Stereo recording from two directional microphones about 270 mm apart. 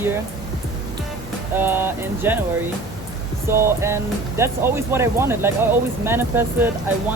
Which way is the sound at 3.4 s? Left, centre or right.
Centre.